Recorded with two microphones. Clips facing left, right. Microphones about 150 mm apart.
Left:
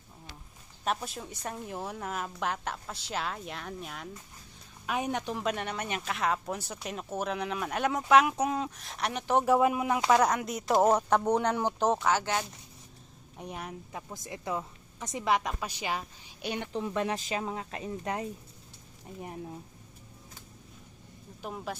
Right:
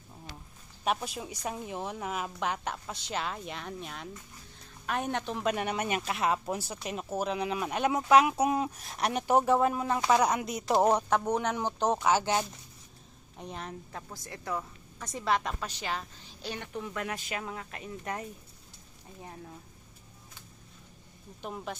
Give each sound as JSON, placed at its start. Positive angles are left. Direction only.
{"t": 0.9, "sound": "speech", "side_deg": 0}
{"t": 9.4, "sound": "speech", "side_deg": 10}
{"t": 10.1, "sound": "speech", "side_deg": -5}
{"t": 12.0, "sound": "speech", "side_deg": -20}
{"t": 13.3, "sound": "a woman's voice", "side_deg": 10}
{"t": 21.4, "sound": "speech", "side_deg": 5}